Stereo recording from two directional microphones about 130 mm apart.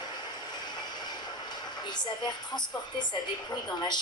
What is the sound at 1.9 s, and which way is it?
A woman's voice, 35° left (ahead or behind).